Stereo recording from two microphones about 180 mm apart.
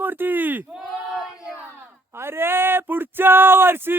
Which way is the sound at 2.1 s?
15° right (ahead or behind).